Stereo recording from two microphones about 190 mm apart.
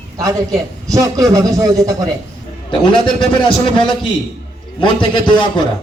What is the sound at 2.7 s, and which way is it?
A man's voice, 25° left (ahead or behind).